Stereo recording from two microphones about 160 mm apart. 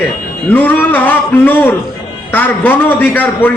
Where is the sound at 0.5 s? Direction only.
10° left (ahead or behind).